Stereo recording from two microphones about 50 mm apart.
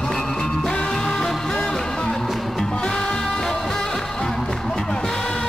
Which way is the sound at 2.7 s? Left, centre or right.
Centre.